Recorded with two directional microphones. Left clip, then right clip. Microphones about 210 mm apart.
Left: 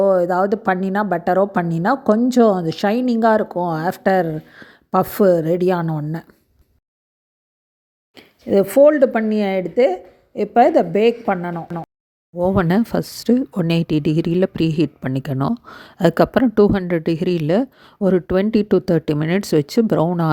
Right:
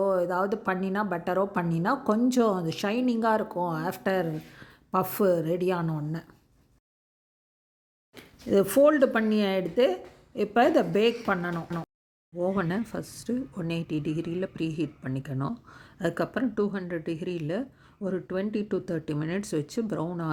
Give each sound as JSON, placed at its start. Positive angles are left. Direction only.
{"t": 0.0, "sound": "a woman's voice", "side_deg": 30}
{"t": 8.1, "sound": "speech", "side_deg": 20}
{"t": 12.4, "sound": "speech", "side_deg": 45}